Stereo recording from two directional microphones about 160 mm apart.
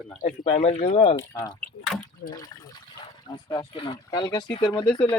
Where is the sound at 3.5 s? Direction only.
30° left (ahead or behind).